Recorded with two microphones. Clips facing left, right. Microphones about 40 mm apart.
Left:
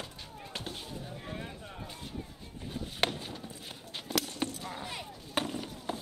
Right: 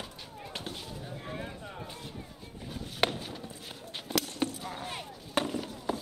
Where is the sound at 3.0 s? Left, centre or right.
Centre.